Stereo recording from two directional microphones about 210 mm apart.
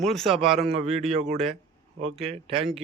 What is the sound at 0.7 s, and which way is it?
A man's voice, 30° right (ahead or behind).